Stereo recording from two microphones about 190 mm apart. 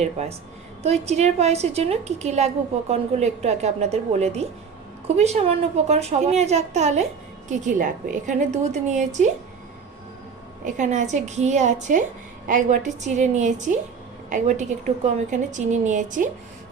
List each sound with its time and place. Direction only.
0.0 s a woman's voice: 35° right (ahead or behind)
10.6 s a woman's voice: 40° right (ahead or behind)